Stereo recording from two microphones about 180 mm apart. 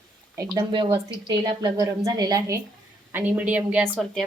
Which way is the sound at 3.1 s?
10° right (ahead or behind).